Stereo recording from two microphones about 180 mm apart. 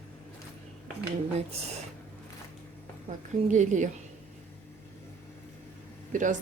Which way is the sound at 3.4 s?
45° right (ahead or behind).